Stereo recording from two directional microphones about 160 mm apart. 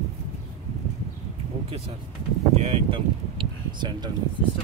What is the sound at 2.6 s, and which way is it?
Speech, 40° right (ahead or behind).